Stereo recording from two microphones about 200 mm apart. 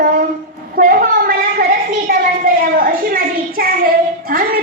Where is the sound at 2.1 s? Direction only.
45° right (ahead or behind).